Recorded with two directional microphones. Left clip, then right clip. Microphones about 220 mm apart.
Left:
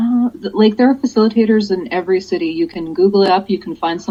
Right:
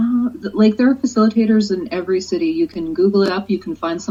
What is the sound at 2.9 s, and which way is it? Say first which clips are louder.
Speech: left 5 dB; 20° left (ahead or behind).